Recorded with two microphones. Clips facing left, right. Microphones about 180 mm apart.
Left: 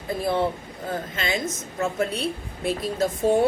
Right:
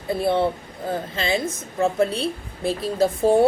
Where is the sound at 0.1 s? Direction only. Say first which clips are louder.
Right 3 dB; 30° right (ahead or behind).